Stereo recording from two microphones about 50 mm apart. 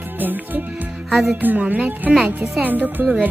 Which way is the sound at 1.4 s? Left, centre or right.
Right.